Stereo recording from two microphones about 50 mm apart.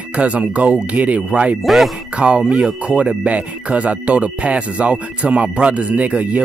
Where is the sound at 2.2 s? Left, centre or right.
Right.